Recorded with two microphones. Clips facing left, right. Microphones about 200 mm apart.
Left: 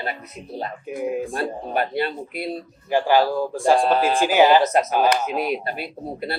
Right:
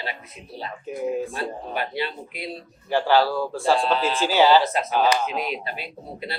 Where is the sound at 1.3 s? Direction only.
50° left (ahead or behind).